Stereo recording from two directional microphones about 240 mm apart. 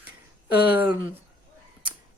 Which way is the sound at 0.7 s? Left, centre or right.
Centre.